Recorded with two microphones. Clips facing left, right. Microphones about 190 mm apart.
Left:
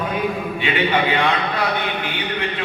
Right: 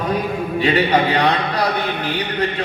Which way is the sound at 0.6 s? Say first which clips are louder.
Right 4 dB; 40° right (ahead or behind).